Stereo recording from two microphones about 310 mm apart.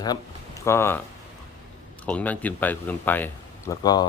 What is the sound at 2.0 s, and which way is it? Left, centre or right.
Speech, centre.